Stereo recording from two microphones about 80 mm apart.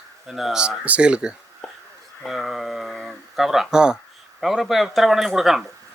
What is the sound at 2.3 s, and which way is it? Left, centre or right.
Speech, centre.